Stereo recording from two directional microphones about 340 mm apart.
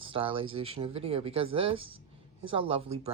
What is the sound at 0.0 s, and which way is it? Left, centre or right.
Speech, centre.